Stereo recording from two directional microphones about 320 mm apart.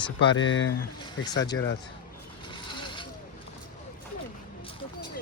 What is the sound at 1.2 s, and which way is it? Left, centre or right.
Speech, centre.